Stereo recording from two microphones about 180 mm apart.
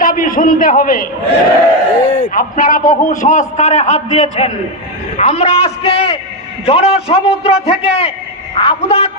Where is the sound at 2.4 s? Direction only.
45° left (ahead or behind).